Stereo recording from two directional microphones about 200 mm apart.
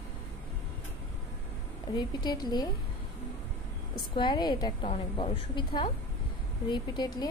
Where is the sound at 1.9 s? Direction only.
20° left (ahead or behind).